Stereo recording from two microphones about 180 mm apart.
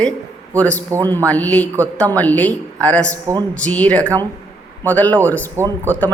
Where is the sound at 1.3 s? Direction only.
10° left (ahead or behind).